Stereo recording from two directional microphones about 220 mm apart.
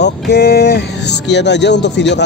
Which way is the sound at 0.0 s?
50° left (ahead or behind).